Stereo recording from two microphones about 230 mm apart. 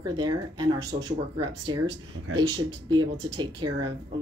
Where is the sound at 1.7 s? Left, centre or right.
Centre.